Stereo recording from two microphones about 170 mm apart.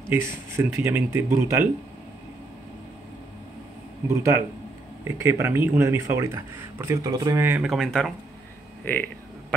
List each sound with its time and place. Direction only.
0.1 s speech: 15° right (ahead or behind)
4.1 s speech: 15° right (ahead or behind)
7.6 s speech: centre (ahead or behind)